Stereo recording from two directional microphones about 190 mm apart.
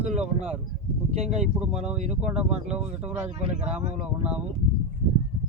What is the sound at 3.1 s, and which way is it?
Speech, 35° right (ahead or behind).